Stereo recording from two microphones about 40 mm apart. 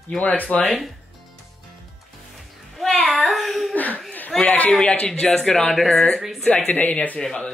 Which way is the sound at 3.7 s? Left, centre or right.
Left.